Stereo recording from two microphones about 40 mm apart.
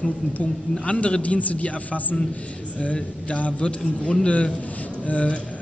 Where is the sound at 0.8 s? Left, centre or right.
Left.